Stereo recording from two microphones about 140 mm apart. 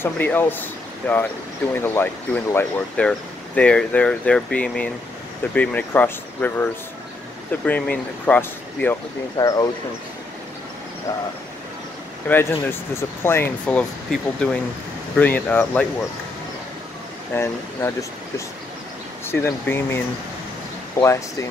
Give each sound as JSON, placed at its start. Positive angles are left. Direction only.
{"t": 0.0, "sound": "speech", "side_deg": 15}
{"t": 9.4, "sound": "speech", "side_deg": 25}
{"t": 12.3, "sound": "speech", "side_deg": 15}
{"t": 17.3, "sound": "speech", "side_deg": 15}
{"t": 19.2, "sound": "speech", "side_deg": 15}